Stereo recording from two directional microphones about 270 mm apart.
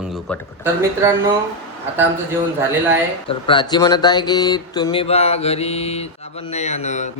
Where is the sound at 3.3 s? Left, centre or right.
Centre.